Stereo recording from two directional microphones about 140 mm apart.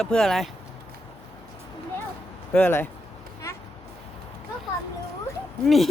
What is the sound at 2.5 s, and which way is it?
Speech, 10° left (ahead or behind).